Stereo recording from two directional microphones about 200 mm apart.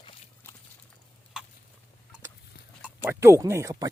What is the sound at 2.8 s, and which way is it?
Speech, 10° right (ahead or behind).